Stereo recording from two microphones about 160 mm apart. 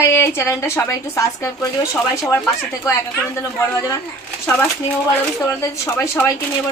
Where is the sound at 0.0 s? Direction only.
15° left (ahead or behind).